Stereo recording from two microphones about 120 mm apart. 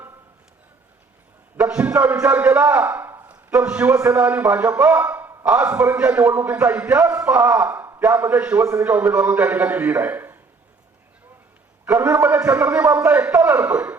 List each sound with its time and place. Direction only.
1.5 s a man's voice: 10° right (ahead or behind)
5.0 s a sound: 20° right (ahead or behind)
5.5 s a man's voice: 10° right (ahead or behind)
11.9 s a man's voice: 10° right (ahead or behind)